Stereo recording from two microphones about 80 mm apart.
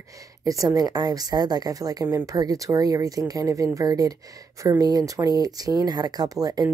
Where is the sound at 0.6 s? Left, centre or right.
Right.